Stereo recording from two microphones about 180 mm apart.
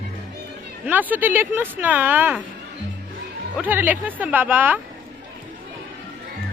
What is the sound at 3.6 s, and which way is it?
Speech, 10° right (ahead or behind).